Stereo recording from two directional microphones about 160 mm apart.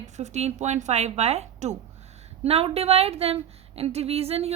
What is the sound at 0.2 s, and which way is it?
A woman's voice, 45° right (ahead or behind).